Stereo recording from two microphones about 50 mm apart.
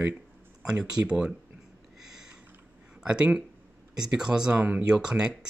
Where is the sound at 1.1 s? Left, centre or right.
Centre.